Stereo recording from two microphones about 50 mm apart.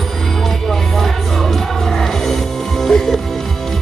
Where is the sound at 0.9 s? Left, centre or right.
Centre.